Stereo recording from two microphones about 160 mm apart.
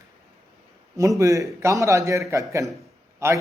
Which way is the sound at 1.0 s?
20° right (ahead or behind).